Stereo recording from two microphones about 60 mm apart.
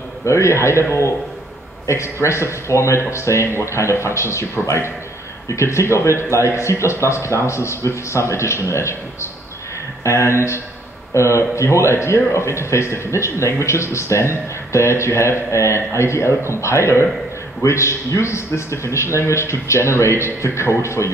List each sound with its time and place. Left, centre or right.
0.2 s a man's voice: left
1.9 s a man's voice: left